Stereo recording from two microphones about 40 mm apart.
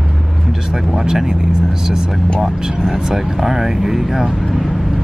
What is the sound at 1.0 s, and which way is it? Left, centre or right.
Speech, centre.